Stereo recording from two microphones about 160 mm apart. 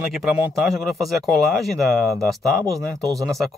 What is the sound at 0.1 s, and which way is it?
Speech, centre (ahead or behind).